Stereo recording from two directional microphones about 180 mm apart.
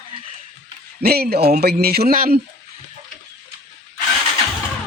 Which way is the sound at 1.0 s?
60° right (ahead or behind).